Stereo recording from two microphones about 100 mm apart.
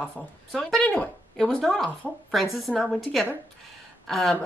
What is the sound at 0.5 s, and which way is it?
Speech, 5° left (ahead or behind).